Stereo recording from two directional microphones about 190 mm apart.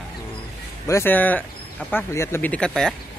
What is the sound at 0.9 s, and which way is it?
Speech, 10° left (ahead or behind).